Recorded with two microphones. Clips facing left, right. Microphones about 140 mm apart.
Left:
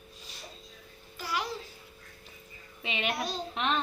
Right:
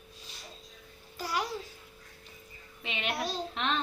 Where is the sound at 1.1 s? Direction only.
40° right (ahead or behind).